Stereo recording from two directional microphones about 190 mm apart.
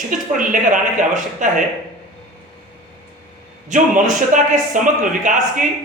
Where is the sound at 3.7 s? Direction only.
40° right (ahead or behind).